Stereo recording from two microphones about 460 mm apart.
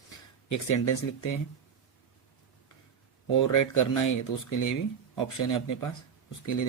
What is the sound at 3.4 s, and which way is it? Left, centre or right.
Speech, left.